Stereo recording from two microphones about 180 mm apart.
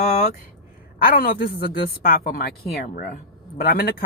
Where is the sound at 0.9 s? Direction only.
50° left (ahead or behind).